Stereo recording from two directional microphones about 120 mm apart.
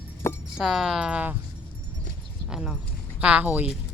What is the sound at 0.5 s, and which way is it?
Speech, 5° right (ahead or behind).